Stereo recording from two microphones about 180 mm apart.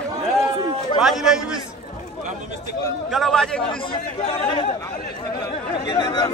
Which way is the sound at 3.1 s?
Centre (ahead or behind).